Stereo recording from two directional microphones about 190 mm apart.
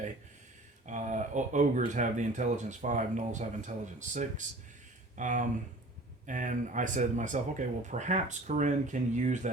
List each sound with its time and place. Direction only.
0.9 s speech: 40° right (ahead or behind)